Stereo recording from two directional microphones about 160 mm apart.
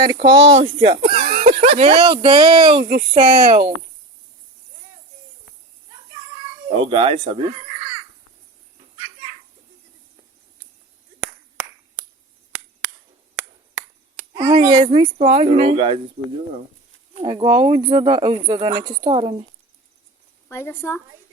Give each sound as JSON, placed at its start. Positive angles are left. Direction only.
{"t": 0.0, "sound": "speech", "side_deg": -30}
{"t": 6.8, "sound": "speech", "side_deg": -35}
{"t": 11.2, "sound": "clapping", "side_deg": -10}
{"t": 13.3, "sound": "finger snapping", "side_deg": -5}
{"t": 14.4, "sound": "speech", "side_deg": -30}
{"t": 17.2, "sound": "speech", "side_deg": -30}
{"t": 20.5, "sound": "a woman's voice", "side_deg": 15}